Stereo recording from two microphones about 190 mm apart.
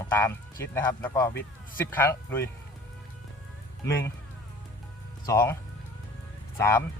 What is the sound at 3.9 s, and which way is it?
Speech, 15° left (ahead or behind).